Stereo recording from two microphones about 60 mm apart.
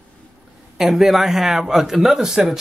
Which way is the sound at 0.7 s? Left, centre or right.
Centre.